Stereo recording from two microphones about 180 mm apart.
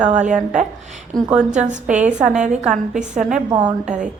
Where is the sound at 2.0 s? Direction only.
5° right (ahead or behind).